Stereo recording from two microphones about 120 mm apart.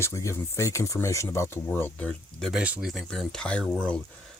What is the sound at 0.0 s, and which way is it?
Speech, 25° left (ahead or behind).